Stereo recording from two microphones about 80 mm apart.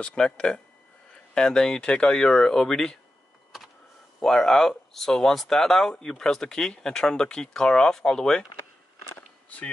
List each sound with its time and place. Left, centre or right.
0.0 s speech: centre
4.2 s speech: centre